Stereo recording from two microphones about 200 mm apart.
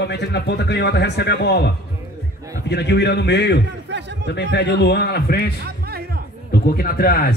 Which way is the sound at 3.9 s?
60° right (ahead or behind).